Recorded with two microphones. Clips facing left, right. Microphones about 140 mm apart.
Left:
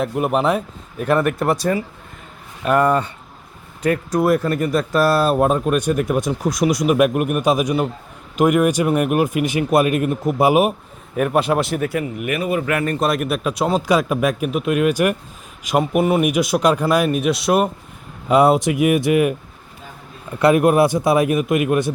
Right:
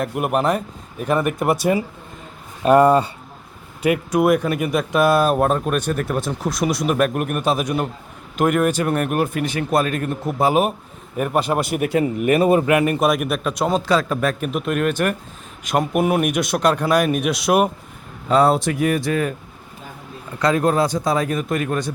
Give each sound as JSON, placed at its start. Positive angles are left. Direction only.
{"t": 0.1, "sound": "speech", "side_deg": -5}
{"t": 2.6, "sound": "speech", "side_deg": -30}
{"t": 4.1, "sound": "speech", "side_deg": 0}
{"t": 4.9, "sound": "speech", "side_deg": -15}
{"t": 5.4, "sound": "speech", "side_deg": 5}
{"t": 11.8, "sound": "speech", "side_deg": -25}
{"t": 12.6, "sound": "speech", "side_deg": -15}
{"t": 13.0, "sound": "speech", "side_deg": 0}
{"t": 18.3, "sound": "speech", "side_deg": 15}
{"t": 20.4, "sound": "speech", "side_deg": 20}